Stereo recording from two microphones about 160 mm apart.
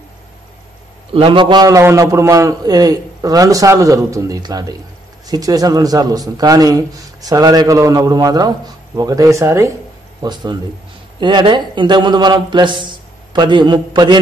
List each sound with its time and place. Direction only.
1.1 s a man's voice: 35° right (ahead or behind)